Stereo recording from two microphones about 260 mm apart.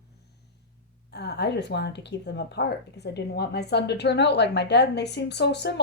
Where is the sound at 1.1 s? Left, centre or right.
Left.